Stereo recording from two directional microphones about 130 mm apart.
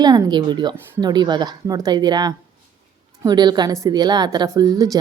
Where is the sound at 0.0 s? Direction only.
30° right (ahead or behind).